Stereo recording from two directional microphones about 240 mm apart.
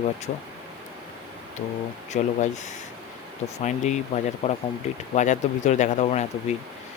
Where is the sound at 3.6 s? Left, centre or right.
Left.